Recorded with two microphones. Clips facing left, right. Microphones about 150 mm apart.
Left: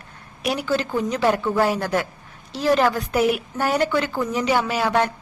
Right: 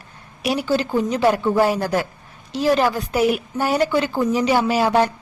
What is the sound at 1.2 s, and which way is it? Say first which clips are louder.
A woman's voice: right 3 dB; 15° right (ahead or behind).